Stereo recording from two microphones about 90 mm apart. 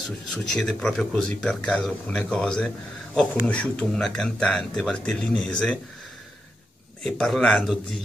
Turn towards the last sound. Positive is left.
turn(degrees=5)  # may be behind; listen again after turning